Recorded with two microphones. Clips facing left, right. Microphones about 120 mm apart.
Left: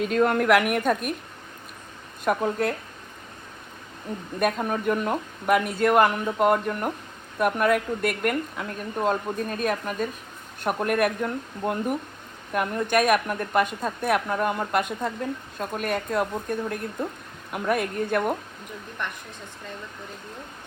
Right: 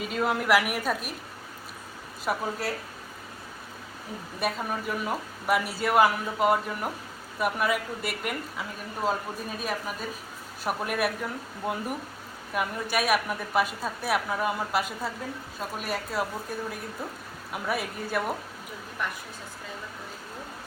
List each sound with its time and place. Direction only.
0.0 s a woman's voice: 5° right (ahead or behind)
4.4 s speech: 50° left (ahead or behind)
5.5 s a woman's voice: 5° right (ahead or behind)